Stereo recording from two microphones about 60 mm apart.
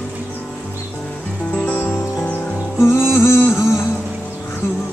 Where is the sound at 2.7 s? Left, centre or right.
Left.